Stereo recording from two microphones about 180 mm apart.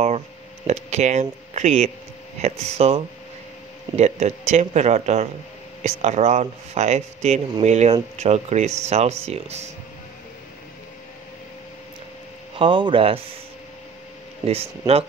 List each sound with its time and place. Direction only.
0.7 s a man's voice: 40° right (ahead or behind)
12.5 s speech: 25° right (ahead or behind)
14.5 s a man's voice: 35° right (ahead or behind)